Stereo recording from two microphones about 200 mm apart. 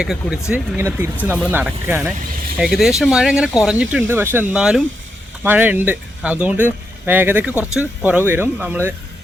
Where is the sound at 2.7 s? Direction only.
Centre (ahead or behind).